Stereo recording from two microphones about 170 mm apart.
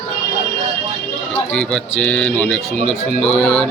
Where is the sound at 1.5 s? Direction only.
5° left (ahead or behind).